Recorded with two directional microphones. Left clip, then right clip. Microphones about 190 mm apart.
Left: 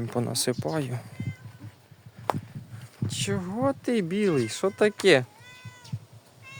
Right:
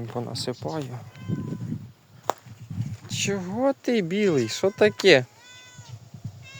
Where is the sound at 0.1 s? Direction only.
45° left (ahead or behind).